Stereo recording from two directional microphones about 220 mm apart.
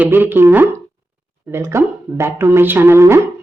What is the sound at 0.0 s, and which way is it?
A woman's voice, 10° right (ahead or behind).